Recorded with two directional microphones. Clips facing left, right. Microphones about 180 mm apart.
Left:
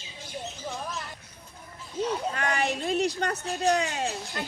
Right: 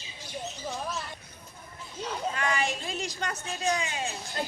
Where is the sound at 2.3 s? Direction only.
60° left (ahead or behind).